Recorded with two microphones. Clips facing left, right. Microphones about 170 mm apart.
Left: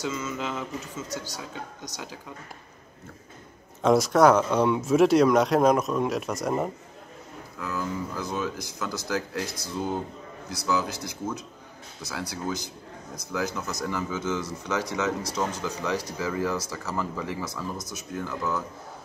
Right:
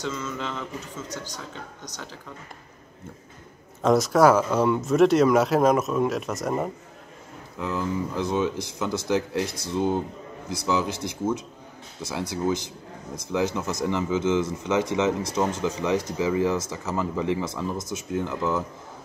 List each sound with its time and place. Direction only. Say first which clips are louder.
0.0 s speech: even; 5° left (ahead or behind)
3.8 s speech: right 1 dB; centre (ahead or behind)
7.5 s a man's voice: right 4 dB; 20° right (ahead or behind)